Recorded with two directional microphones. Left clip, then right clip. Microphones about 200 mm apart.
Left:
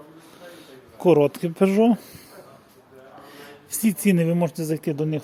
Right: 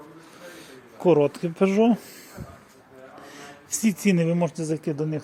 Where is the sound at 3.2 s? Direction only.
5° left (ahead or behind).